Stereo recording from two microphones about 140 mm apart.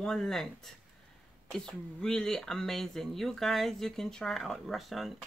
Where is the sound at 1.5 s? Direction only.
5° left (ahead or behind).